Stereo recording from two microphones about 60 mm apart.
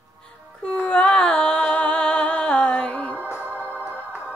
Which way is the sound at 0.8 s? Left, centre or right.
Left.